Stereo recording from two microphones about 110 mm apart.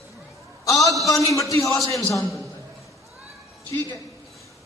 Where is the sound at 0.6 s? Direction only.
30° left (ahead or behind).